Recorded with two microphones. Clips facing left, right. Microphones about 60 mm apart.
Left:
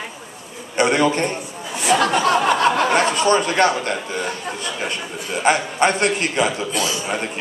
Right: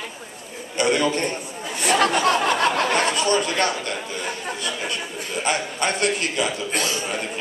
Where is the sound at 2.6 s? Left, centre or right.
Left.